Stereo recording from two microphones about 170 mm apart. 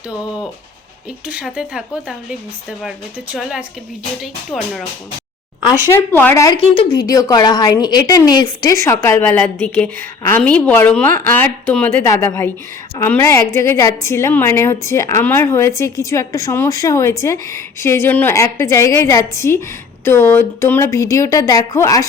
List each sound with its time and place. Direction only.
1.3 s speech: 5° right (ahead or behind)
4.2 s speech: centre (ahead or behind)
5.6 s a woman's voice: 20° left (ahead or behind)